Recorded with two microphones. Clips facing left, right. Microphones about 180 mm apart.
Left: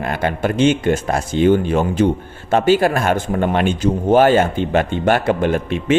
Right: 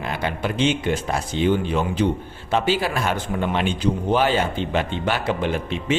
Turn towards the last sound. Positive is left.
turn(degrees=50)  # may be behind; listen again after turning